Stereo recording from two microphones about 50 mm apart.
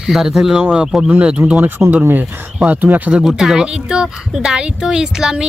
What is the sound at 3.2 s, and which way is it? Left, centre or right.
Speech, centre.